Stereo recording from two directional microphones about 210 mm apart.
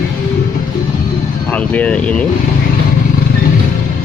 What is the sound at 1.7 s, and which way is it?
Speech, 5° left (ahead or behind).